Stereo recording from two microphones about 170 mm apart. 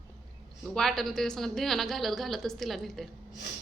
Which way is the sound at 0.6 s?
5° left (ahead or behind).